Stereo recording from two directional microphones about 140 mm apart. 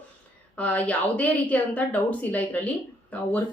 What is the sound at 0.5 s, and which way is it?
A woman's voice, 10° left (ahead or behind).